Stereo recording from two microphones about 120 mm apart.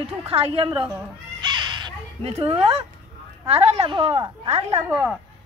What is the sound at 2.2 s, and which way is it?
Speech, 55° right (ahead or behind).